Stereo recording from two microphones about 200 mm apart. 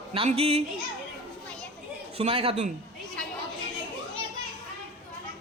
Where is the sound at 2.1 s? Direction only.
30° right (ahead or behind).